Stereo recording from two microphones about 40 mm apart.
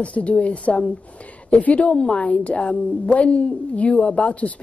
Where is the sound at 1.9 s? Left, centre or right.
Left.